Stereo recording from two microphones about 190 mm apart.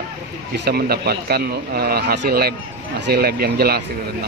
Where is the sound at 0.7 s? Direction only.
55° right (ahead or behind).